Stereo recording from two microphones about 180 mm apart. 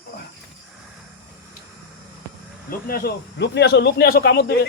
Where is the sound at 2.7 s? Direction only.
55° left (ahead or behind).